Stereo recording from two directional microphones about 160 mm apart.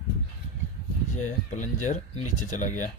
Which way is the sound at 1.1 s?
50° left (ahead or behind).